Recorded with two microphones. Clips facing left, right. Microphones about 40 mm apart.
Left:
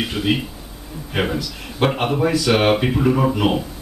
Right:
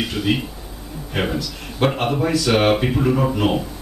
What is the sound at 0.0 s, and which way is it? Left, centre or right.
Speech, centre.